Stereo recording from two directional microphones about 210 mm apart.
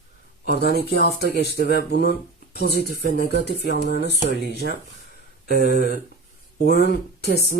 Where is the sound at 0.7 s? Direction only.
50° left (ahead or behind).